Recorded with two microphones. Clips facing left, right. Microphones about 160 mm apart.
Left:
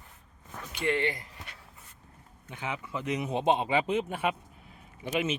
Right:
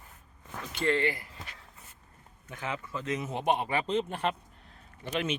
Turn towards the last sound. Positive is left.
turn(degrees=5)  # may be behind; listen again after turning